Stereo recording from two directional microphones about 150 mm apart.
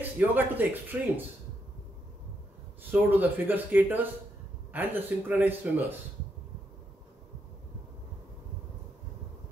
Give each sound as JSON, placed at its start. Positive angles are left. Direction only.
{"t": 0.2, "sound": "speech", "side_deg": -10}
{"t": 2.8, "sound": "speech", "side_deg": -10}